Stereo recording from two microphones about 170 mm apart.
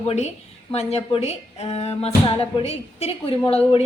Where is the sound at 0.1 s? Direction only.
40° left (ahead or behind).